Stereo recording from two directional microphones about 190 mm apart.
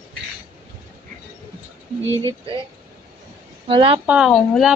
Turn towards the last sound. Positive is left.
turn(degrees=0)  # may be behind; listen again after turning